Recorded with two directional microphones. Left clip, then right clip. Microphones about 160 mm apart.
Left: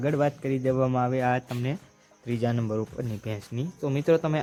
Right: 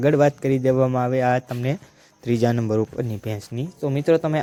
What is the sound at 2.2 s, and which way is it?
Speech, 30° right (ahead or behind).